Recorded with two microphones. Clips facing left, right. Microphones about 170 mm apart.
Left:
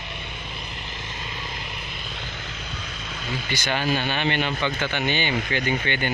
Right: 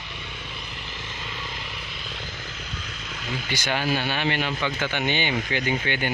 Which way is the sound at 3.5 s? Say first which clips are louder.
Left 1 dB; 10° right (ahead or behind).